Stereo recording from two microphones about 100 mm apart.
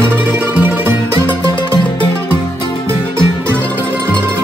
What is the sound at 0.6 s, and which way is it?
Music, 20° right (ahead or behind).